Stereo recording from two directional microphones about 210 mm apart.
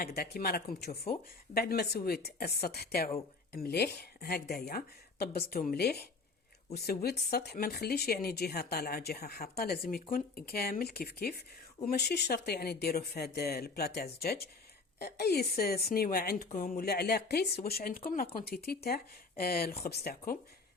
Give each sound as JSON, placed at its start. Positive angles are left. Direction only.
{"t": 0.0, "sound": "speech", "side_deg": 45}